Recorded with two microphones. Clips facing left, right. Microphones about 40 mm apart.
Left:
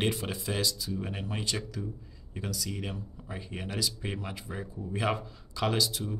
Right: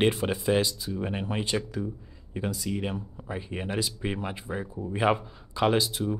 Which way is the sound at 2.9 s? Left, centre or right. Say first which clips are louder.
Right 5 dB; right.